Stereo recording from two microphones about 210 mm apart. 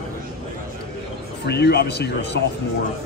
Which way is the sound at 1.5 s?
50° left (ahead or behind).